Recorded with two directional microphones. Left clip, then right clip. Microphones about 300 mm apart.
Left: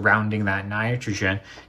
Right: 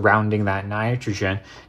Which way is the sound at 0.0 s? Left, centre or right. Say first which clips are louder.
Right 2 dB; right.